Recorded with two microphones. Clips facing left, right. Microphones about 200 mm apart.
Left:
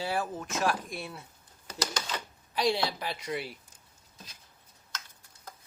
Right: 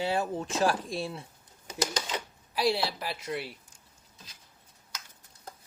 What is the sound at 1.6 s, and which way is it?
Typewriter, 15° right (ahead or behind).